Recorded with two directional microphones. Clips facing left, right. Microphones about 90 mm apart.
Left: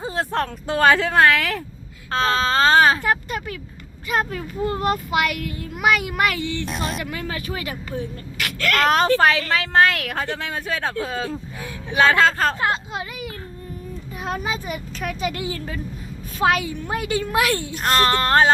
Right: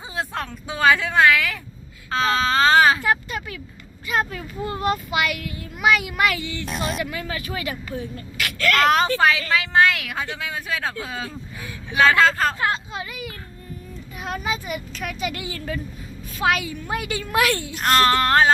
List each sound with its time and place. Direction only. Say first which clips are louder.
0.0 s a woman's voice: left 5 dB; 40° left (ahead or behind)
6.7 s speech: even; centre (ahead or behind)
7.0 s speech: even; 40° left (ahead or behind)
8.8 s a woman's voice: left 2 dB; 35° left (ahead or behind)
14.3 s a woman's voice: left 1 dB; 35° left (ahead or behind)
17.3 s female singing: right 3 dB; 20° left (ahead or behind)